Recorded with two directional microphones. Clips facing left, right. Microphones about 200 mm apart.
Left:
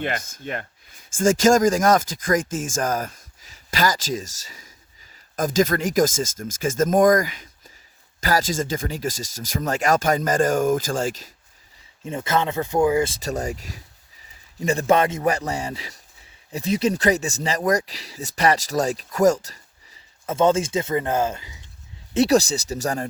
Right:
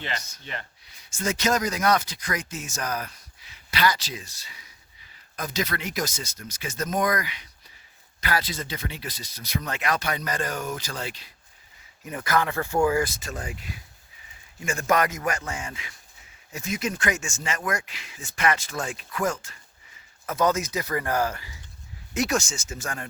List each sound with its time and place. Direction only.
0.0 s speech: 50° left (ahead or behind)
12.0 s speech: 25° left (ahead or behind)
13.1 s speech: 40° left (ahead or behind)
20.2 s speech: 25° left (ahead or behind)
22.1 s speech: 35° left (ahead or behind)